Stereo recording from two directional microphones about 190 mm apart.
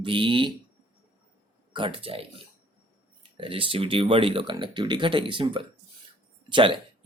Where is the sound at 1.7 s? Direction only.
25° right (ahead or behind).